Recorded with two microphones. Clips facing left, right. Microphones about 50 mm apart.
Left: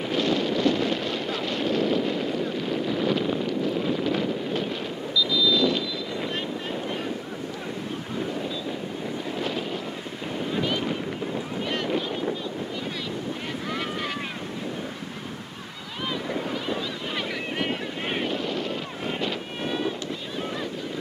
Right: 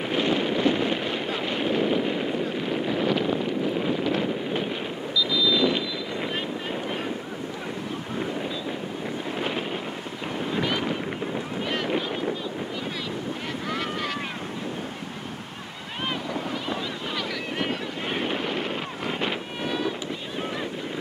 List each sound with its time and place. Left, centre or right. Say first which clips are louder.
0.1 s a sound: even; right
3.4 s wind noise: even; centre
5.3 s vehicle: even; centre
10.5 s boat: even; centre
18.2 s wind noise: even; right
19.6 s boat: even; centre